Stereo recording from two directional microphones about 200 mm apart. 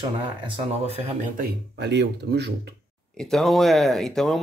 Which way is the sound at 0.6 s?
30° right (ahead or behind).